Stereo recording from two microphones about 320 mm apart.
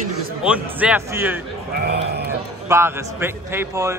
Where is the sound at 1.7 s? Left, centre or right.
Right.